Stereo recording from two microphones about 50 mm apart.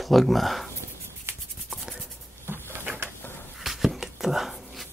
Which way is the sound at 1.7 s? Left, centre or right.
Centre.